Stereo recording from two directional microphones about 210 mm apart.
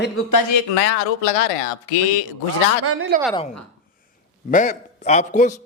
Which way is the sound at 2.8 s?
80° right.